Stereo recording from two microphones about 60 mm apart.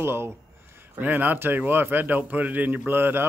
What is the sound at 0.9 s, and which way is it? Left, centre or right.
Speech, right.